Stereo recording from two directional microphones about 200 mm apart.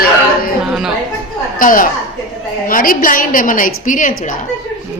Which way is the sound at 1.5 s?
45° left (ahead or behind).